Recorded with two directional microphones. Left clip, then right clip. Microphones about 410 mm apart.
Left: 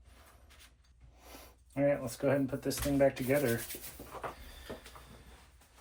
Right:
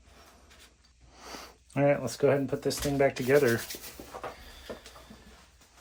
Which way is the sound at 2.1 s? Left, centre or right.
Right.